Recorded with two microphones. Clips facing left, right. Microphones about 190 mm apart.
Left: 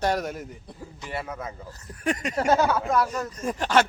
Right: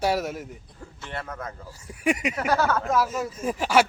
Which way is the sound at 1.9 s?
10° right (ahead or behind).